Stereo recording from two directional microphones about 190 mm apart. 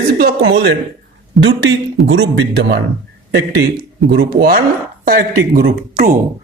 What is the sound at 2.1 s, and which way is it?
Speech, 70° right (ahead or behind).